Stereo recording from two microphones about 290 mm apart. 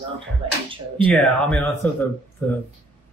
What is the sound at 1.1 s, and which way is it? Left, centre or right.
Speech, centre.